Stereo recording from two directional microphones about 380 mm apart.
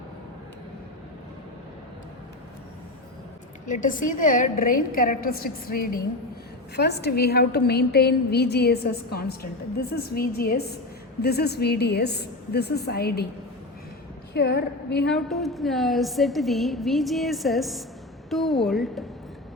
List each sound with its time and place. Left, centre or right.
3.7 s a woman's voice: left
14.3 s a woman's voice: left
15.0 s a woman's voice: centre